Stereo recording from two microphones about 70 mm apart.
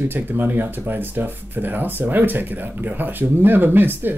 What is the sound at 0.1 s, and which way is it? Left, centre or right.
Speech, right.